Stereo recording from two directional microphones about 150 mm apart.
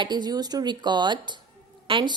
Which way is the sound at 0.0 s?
30° right (ahead or behind).